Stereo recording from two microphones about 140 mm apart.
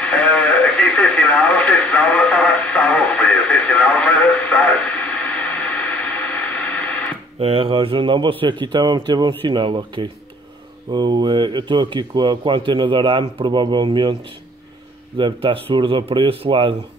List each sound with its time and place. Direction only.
0.0 s speech: 10° left (ahead or behind)
7.3 s speech: 45° right (ahead or behind)
15.1 s speech: 35° right (ahead or behind)